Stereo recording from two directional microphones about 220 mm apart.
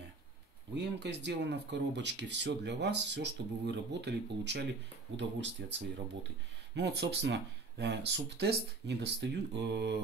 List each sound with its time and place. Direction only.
0.7 s speech: 50° right (ahead or behind)